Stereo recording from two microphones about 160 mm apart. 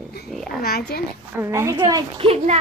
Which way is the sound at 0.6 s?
75° left (ahead or behind).